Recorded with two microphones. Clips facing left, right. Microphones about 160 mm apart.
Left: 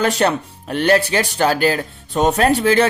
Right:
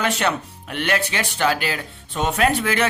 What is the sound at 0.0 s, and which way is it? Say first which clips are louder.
Speech: left 5 dB; 40° left (ahead or behind).